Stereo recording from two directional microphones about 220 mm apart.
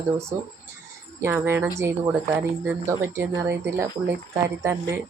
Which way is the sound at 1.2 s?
10° right (ahead or behind).